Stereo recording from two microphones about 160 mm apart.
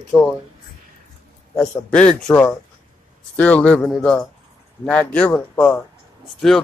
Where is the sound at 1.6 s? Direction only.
5° left (ahead or behind).